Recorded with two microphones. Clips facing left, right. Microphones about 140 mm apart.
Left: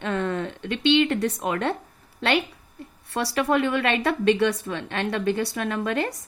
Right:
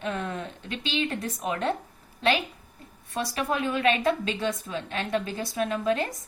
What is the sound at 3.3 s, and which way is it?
A woman's voice, 75° left (ahead or behind).